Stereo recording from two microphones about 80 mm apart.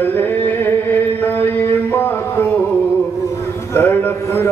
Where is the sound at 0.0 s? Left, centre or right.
Left.